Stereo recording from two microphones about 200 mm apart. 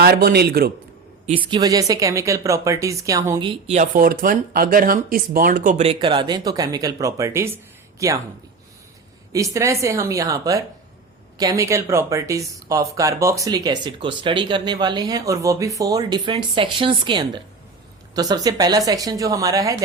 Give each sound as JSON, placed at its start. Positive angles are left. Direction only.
{"t": 0.0, "sound": "a man's voice", "side_deg": -50}
{"t": 1.5, "sound": "speech", "side_deg": -20}
{"t": 3.9, "sound": "speech", "side_deg": -45}
{"t": 9.3, "sound": "speech", "side_deg": -15}